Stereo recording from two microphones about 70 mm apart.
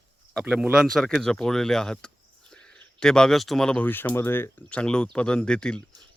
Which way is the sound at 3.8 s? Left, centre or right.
Left.